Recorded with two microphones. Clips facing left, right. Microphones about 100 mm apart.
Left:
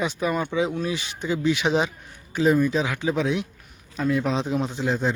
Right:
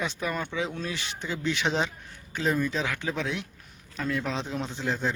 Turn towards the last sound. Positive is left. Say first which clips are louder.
# left 5 dB
turn(degrees=15)  # may be behind; listen again after turning